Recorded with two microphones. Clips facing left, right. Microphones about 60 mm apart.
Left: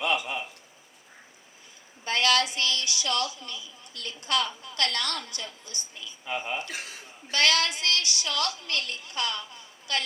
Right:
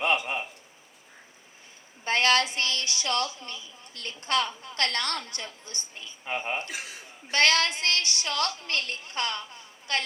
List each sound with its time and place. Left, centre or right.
0.0 s a sound: right
2.0 s a woman's voice: right
6.7 s a man's voice: centre
7.3 s a woman's voice: right